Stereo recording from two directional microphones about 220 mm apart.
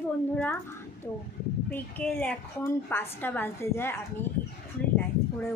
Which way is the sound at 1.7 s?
5° left (ahead or behind).